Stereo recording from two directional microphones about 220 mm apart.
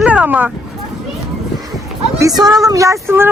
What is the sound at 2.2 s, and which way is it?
Speech, 15° right (ahead or behind).